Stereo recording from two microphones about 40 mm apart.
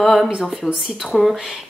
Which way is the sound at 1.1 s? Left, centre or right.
Centre.